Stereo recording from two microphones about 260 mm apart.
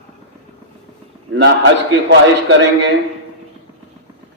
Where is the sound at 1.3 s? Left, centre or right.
Right.